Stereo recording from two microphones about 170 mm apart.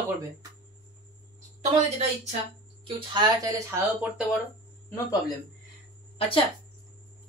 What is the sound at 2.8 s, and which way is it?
Speech, 30° right (ahead or behind).